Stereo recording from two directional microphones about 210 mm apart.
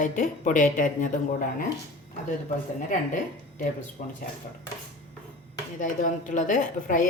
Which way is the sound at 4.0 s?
40° left (ahead or behind).